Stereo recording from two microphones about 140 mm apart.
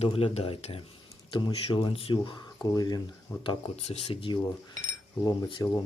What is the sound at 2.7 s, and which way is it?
Speech, 30° left (ahead or behind).